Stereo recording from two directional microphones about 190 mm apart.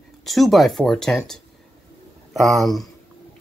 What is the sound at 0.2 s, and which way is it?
Speech, centre (ahead or behind).